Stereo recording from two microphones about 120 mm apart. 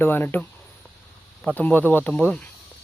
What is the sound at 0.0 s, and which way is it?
Speech, 15° left (ahead or behind).